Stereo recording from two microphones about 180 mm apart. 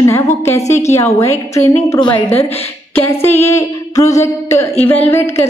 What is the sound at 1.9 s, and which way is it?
Speech, 25° left (ahead or behind).